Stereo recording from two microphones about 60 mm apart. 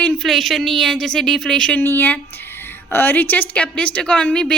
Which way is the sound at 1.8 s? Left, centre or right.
Left.